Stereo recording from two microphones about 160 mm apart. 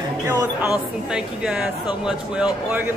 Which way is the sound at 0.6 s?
5° right (ahead or behind).